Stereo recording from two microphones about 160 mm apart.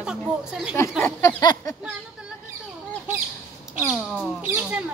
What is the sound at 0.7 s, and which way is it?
Speech, 15° left (ahead or behind).